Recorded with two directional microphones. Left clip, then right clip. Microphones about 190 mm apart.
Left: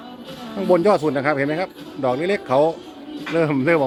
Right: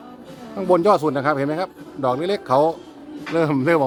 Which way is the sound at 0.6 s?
15° right (ahead or behind).